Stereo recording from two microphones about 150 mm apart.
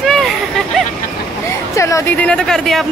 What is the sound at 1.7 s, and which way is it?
A woman's voice, 15° left (ahead or behind).